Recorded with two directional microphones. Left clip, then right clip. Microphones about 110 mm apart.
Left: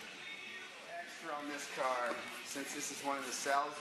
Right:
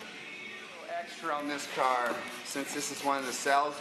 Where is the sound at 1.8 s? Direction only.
Centre (ahead or behind).